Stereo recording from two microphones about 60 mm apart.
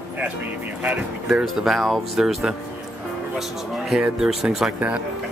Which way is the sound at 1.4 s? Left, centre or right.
Centre.